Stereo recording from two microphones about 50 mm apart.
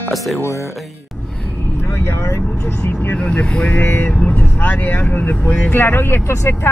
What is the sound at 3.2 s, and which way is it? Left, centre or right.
Speech, left.